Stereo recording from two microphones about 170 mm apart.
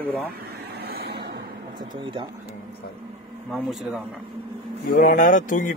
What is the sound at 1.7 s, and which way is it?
Speech, 30° right (ahead or behind).